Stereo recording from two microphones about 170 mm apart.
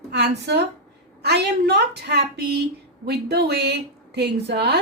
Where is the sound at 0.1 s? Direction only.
75° right (ahead or behind).